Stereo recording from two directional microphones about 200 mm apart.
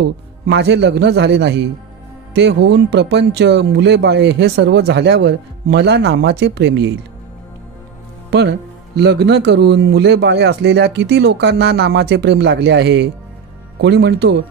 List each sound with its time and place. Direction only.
0.0 s speech: 60° right (ahead or behind)
8.3 s speech: 60° right (ahead or behind)